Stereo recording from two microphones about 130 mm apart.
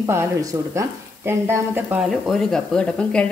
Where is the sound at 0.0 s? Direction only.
25° right (ahead or behind).